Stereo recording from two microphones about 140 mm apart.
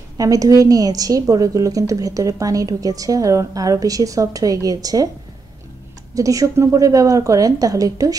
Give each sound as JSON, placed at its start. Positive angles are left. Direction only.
{"t": 0.2, "sound": "a woman's voice", "side_deg": -25}
{"t": 6.1, "sound": "a woman's voice", "side_deg": -25}